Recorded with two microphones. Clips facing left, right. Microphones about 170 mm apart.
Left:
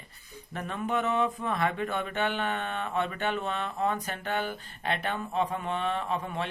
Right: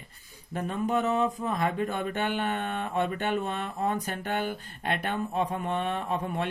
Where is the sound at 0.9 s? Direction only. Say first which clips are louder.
Right 1 dB; 40° right (ahead or behind).